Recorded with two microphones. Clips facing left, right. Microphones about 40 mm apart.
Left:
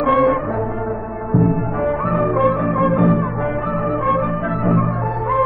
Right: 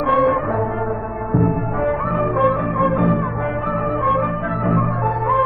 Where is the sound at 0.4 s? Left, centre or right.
Centre.